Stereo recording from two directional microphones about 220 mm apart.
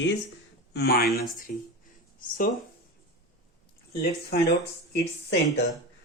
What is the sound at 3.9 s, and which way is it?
Speech, 45° left (ahead or behind).